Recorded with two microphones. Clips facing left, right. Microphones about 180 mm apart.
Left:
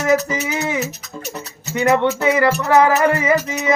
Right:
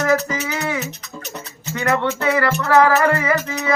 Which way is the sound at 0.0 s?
15° left (ahead or behind).